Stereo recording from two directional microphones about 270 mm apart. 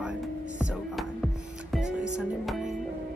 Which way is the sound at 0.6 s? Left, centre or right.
Centre.